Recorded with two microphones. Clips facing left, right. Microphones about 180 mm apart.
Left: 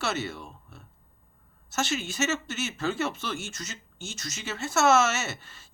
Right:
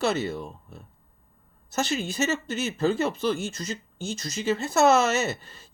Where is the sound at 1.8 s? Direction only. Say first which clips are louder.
Right 3 dB; 35° right (ahead or behind).